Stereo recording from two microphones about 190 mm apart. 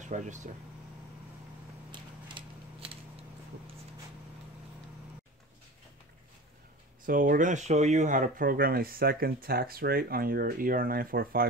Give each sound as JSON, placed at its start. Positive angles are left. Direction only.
{"t": 0.0, "sound": "speech", "side_deg": -40}
{"t": 1.9, "sound": "a sound", "side_deg": -25}
{"t": 7.1, "sound": "speech", "side_deg": -45}